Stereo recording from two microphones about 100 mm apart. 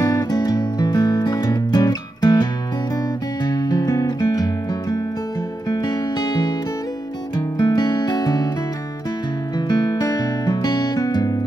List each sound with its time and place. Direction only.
0.0 s music: 35° left (ahead or behind)
3.4 s music: 45° left (ahead or behind)
5.7 s music: 40° left (ahead or behind)
7.5 s music: 45° left (ahead or behind)
9.7 s music: 45° left (ahead or behind)